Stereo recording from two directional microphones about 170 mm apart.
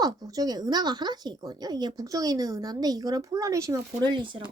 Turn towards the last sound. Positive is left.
turn(degrees=-30)  # may be behind; listen again after turning